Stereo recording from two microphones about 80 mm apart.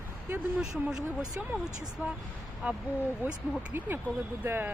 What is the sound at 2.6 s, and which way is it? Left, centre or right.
Speech, centre.